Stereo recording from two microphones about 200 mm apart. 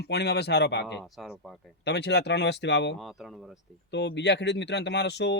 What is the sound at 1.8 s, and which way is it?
Speech, 60° left (ahead or behind).